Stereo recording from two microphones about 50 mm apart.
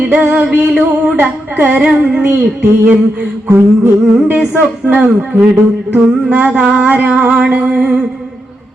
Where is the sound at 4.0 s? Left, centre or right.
Centre.